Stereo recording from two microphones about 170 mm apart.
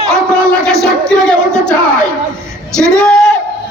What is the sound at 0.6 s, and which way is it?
Music, 5° left (ahead or behind).